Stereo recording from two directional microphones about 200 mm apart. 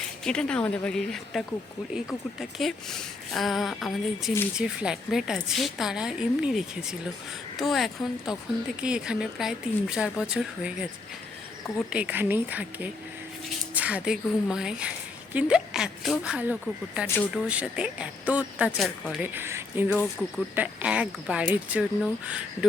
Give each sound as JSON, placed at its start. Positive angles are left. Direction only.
{"t": 0.3, "sound": "a woman's voice", "side_deg": 5}
{"t": 11.9, "sound": "a woman's voice", "side_deg": -5}